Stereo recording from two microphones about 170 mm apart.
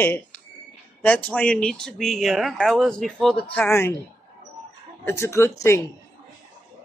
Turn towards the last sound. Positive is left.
turn(degrees=15)  # may be behind; listen again after turning